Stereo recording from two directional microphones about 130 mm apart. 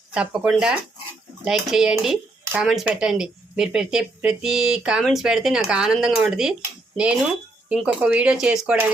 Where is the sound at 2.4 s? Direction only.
10° right (ahead or behind).